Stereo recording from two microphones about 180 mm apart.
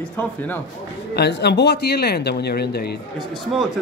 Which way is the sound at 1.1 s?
70° left (ahead or behind).